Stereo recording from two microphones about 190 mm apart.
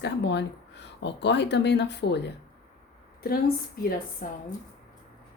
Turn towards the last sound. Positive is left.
turn(degrees=45)  # may be behind; listen again after turning